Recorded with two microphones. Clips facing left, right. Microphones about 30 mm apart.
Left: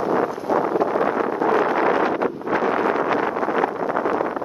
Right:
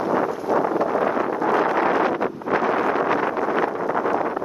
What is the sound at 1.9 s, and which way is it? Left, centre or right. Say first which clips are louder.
Wind noise: left 1 dB; left.